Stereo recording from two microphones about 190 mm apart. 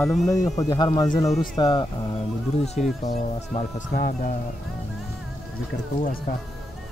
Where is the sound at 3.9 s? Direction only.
50° left (ahead or behind).